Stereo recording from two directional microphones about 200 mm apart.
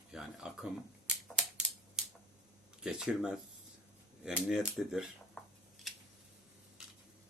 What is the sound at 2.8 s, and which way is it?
Speech, 5° right (ahead or behind).